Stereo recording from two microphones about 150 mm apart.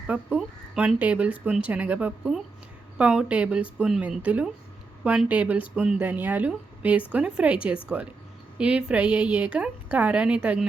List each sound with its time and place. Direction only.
0.1 s speech: 10° right (ahead or behind)